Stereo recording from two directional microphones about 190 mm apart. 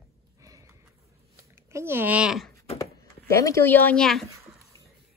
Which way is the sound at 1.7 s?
15° right (ahead or behind).